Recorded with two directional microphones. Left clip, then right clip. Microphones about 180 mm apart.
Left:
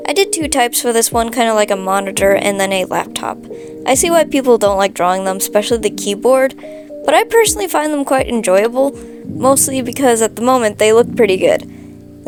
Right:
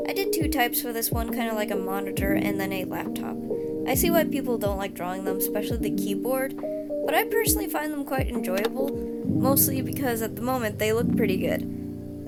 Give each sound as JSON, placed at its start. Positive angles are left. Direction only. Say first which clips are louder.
{"t": 0.0, "sound": "speech", "louder": "left 11 dB", "side_deg": 55}